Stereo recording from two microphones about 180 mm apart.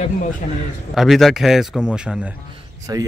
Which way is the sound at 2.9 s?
20° right (ahead or behind).